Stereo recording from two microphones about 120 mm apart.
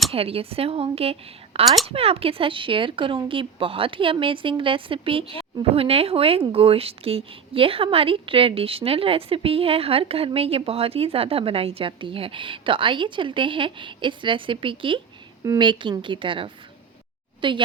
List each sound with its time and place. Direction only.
0.1 s a woman's voice: 55° right (ahead or behind)